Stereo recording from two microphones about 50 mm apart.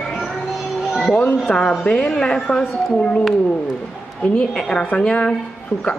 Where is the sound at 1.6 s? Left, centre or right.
Left.